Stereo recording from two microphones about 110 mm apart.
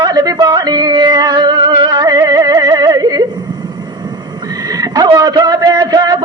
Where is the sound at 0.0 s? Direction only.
35° right (ahead or behind).